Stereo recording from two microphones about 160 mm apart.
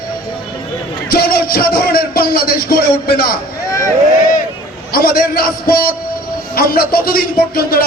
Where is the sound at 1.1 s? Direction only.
70° left (ahead or behind).